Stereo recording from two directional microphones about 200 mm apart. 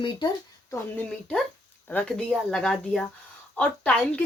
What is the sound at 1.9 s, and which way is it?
Speech, 5° left (ahead or behind).